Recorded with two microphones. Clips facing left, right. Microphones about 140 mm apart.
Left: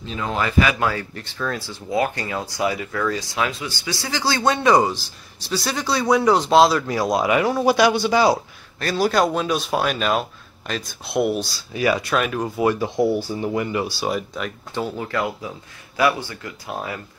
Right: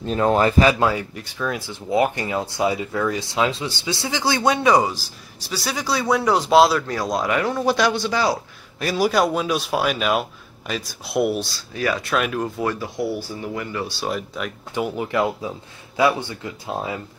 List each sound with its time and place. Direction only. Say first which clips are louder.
0.0 s speech: right 7 dB; 45° right (ahead or behind)
1.1 s speech: right 1 dB; 10° right (ahead or behind)
4.4 s a man's voice: left 1 dB; 5° right (ahead or behind)
6.9 s speech: left 3 dB; 10° left (ahead or behind)
8.7 s a man's voice: even; 10° right (ahead or behind)
11.7 s speech: left 3 dB; 10° left (ahead or behind)
12.0 s a man's voice: even; centre (ahead or behind)
12.8 s speech: left 5 dB; 20° left (ahead or behind)
13.9 s a man's voice: left 2 dB; centre (ahead or behind)
14.7 s speech: right 3 dB; 15° right (ahead or behind)